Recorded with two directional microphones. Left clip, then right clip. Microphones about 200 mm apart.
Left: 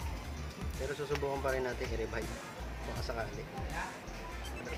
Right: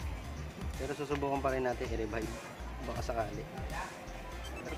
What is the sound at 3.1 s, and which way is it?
Speech, 40° right (ahead or behind).